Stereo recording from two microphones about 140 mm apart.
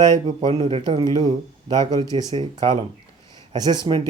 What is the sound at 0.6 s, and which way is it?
A man's voice, 30° right (ahead or behind).